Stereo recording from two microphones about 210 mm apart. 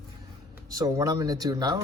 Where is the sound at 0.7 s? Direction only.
15° right (ahead or behind).